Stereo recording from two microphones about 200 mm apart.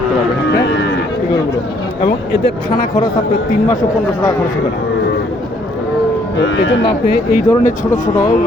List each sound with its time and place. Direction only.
2.4 s speech: 20° left (ahead or behind)
6.3 s speech: 65° left (ahead or behind)
7.1 s speech: 45° left (ahead or behind)
7.9 s speech: 15° left (ahead or behind)